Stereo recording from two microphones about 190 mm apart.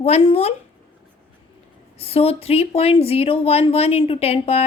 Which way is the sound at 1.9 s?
30° left (ahead or behind).